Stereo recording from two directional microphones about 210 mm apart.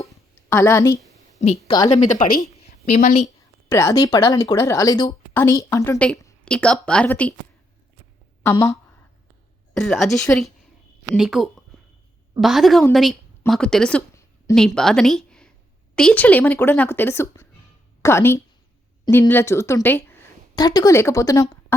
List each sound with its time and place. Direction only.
0.1 s a sound: 15° left (ahead or behind)
1.5 s a woman's voice: 25° left (ahead or behind)
2.3 s a woman's voice: 35° left (ahead or behind)
3.7 s a woman's voice: 15° left (ahead or behind)
8.4 s a woman's voice: 15° left (ahead or behind)
9.7 s a woman's voice: centre (ahead or behind)
11.7 s a sound: centre (ahead or behind)
12.4 s a woman's voice: centre (ahead or behind)
14.8 s a woman's voice: centre (ahead or behind)